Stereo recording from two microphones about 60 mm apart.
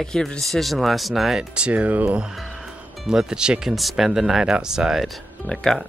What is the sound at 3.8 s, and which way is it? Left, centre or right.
Speech, centre.